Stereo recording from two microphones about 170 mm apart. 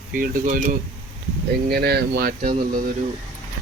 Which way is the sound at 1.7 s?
70° right (ahead or behind).